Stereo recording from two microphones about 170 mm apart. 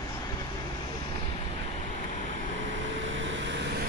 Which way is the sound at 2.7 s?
90° right.